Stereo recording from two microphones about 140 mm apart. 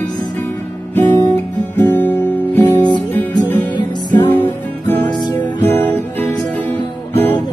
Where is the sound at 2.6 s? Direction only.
30° left (ahead or behind).